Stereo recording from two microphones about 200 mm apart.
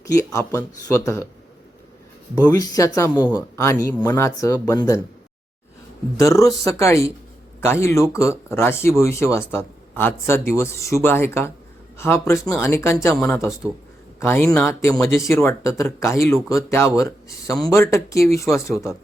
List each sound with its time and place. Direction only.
0.1 s speech: 15° left (ahead or behind)
2.5 s speech: 15° left (ahead or behind)
6.1 s speech: 15° left (ahead or behind)